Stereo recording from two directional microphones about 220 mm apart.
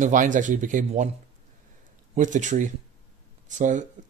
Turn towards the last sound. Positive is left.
turn(degrees=-35)  # may be behind; listen again after turning